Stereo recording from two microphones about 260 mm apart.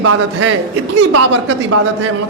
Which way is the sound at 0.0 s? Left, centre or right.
Right.